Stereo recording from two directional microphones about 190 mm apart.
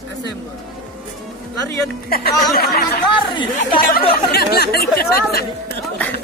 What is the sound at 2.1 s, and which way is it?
Speech, 55° left (ahead or behind).